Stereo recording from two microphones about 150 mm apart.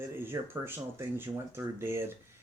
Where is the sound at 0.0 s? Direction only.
15° right (ahead or behind).